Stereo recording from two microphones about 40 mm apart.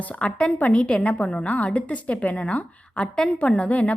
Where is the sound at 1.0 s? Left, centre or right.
Left.